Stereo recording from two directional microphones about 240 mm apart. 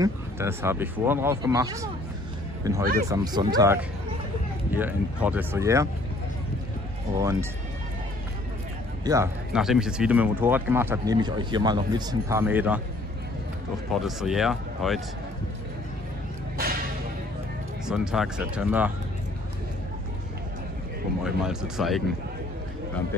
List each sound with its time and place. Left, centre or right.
0.0 s speech: centre
7.2 s speech: centre
9.0 s speech: centre
9.5 s speech: centre
14.0 s speech: centre
17.8 s speech: centre
21.2 s speech: centre